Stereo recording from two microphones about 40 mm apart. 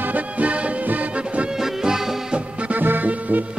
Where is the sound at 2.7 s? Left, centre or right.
Right.